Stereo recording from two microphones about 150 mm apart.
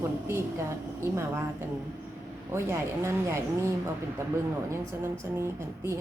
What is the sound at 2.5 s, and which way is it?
A woman's voice, 15° right (ahead or behind).